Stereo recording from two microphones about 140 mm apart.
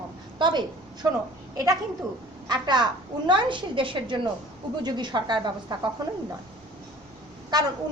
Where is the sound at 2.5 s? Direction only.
30° right (ahead or behind).